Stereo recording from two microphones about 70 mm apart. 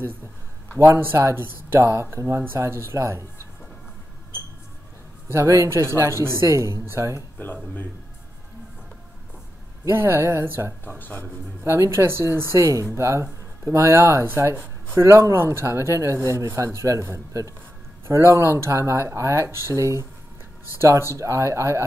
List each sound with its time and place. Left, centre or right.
0.9 s speech: right
5.3 s speech: right
7.3 s speech: left
9.8 s speech: right
10.9 s speech: left
11.6 s speech: right
21.1 s speech: right